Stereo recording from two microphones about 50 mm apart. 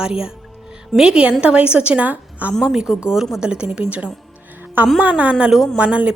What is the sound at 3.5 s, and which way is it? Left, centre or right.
A woman's voice, right.